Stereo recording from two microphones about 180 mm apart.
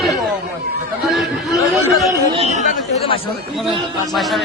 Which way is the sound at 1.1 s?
Centre (ahead or behind).